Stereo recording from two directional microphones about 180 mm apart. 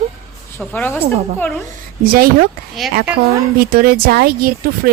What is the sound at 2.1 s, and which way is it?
Speech, 55° right (ahead or behind).